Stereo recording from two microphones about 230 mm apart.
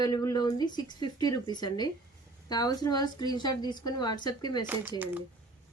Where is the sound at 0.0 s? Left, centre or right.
Centre.